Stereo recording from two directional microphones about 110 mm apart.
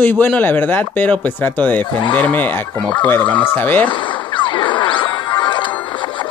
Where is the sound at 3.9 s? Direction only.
45° left (ahead or behind).